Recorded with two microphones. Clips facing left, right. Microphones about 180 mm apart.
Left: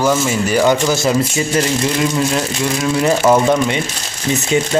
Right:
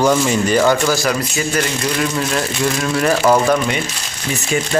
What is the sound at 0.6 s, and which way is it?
Speech, 20° left (ahead or behind).